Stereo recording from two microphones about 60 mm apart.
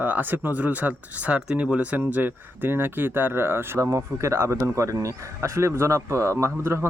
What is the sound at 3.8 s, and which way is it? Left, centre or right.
Speech, right.